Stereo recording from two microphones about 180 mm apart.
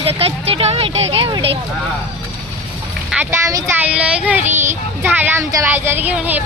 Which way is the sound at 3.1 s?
10° right (ahead or behind).